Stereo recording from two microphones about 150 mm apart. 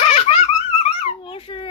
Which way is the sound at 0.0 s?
45° left (ahead or behind).